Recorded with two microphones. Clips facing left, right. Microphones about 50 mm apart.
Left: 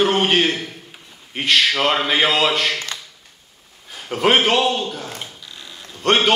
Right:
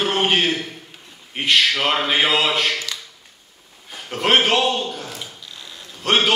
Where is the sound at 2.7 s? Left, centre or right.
Left.